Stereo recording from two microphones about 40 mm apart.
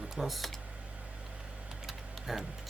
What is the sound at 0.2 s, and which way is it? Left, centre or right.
Speech, centre.